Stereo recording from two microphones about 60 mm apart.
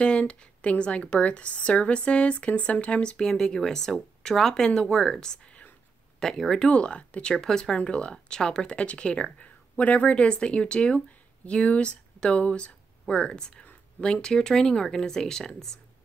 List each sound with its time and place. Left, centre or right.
0.0 s speech: centre
6.1 s speech: centre
6.7 s speech: centre